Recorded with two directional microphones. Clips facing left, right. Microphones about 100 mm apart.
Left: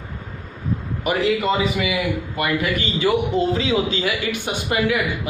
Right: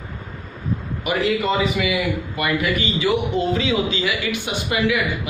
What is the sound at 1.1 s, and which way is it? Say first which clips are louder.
Speech: left 1 dB; 40° left (ahead or behind).